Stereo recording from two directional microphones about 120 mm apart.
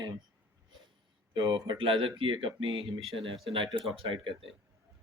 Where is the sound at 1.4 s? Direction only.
40° right (ahead or behind).